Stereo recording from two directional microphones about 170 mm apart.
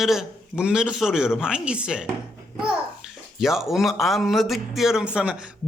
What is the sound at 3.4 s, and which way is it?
A man's voice, centre (ahead or behind).